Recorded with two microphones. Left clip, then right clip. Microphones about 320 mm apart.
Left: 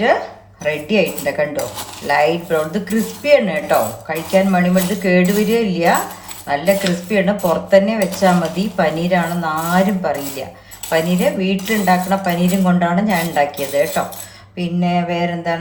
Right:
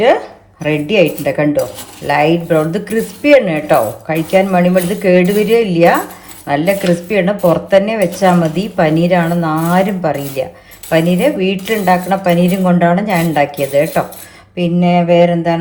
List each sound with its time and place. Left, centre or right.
0.6 s speech: centre